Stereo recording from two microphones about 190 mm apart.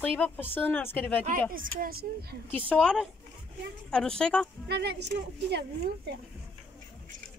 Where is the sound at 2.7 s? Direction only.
5° left (ahead or behind).